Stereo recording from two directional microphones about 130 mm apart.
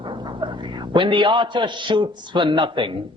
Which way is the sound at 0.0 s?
35° right (ahead or behind).